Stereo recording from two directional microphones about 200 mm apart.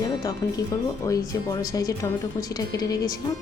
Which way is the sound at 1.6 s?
20° left (ahead or behind).